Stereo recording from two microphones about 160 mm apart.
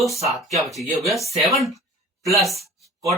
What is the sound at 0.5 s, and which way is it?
Speech, centre (ahead or behind).